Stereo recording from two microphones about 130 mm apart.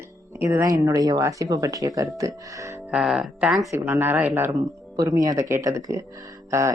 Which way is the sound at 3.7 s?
20° right (ahead or behind).